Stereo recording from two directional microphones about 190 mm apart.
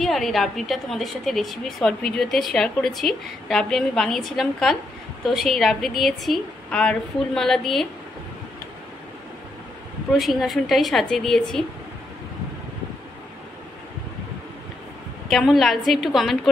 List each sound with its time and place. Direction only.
0.0 s a woman's voice: centre (ahead or behind)
10.1 s a woman's voice: centre (ahead or behind)
15.2 s a woman's voice: centre (ahead or behind)